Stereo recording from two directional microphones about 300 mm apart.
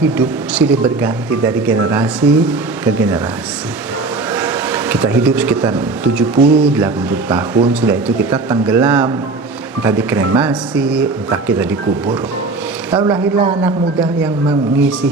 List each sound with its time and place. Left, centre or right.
0.0 s speech: centre
4.4 s speech: centre
13.0 s a man's voice: centre
14.8 s speech: centre